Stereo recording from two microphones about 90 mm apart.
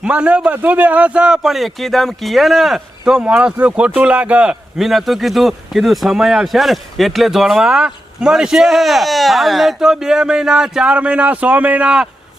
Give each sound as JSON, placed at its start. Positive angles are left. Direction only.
{"t": 0.0, "sound": "a man's voice", "side_deg": -10}
{"t": 4.8, "sound": "speech", "side_deg": 0}